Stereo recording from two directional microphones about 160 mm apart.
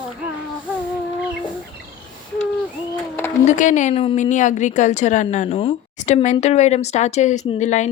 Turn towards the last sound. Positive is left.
turn(degrees=45)  # may be behind; listen again after turning